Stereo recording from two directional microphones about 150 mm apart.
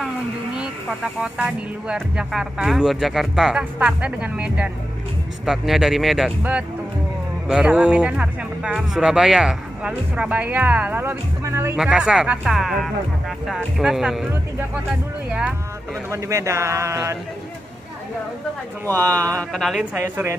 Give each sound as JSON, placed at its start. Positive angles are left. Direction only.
{"t": 0.6, "sound": "speech", "side_deg": -5}
{"t": 11.8, "sound": "speech", "side_deg": -5}
{"t": 16.1, "sound": "speech", "side_deg": -20}
{"t": 18.9, "sound": "speech", "side_deg": 10}
{"t": 19.5, "sound": "speech", "side_deg": 0}
{"t": 20.0, "sound": "speech", "side_deg": -20}